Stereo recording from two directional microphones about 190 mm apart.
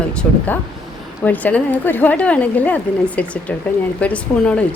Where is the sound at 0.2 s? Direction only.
10° left (ahead or behind).